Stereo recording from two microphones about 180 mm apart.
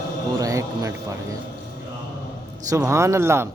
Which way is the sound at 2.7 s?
15° right (ahead or behind).